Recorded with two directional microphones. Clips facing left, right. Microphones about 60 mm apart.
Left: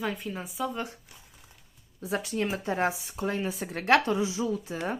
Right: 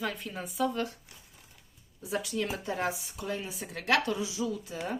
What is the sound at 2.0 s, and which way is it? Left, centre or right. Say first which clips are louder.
Speech: left 3 dB; left.